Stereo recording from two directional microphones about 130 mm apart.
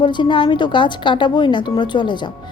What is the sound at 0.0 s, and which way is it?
Speech, 35° left (ahead or behind).